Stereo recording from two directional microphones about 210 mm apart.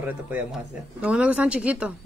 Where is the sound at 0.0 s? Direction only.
10° right (ahead or behind).